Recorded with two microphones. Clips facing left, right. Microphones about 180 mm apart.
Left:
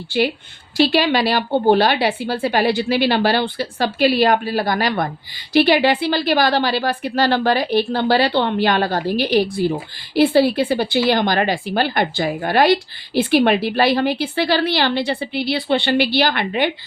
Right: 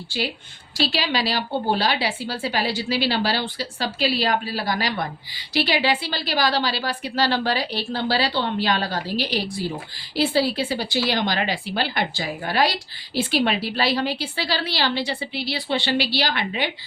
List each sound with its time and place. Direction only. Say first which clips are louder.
0.1 s a woman's voice: left 9 dB; 65° left (ahead or behind)